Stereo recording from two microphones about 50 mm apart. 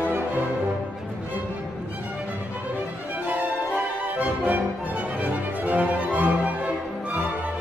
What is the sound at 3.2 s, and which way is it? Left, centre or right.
Music, right.